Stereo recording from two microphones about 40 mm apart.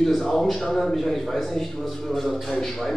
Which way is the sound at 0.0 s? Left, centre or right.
Centre.